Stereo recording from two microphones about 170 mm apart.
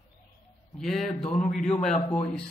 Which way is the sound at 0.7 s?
Centre (ahead or behind).